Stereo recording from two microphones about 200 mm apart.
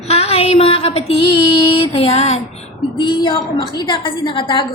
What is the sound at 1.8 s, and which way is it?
A woman's voice, 30° left (ahead or behind).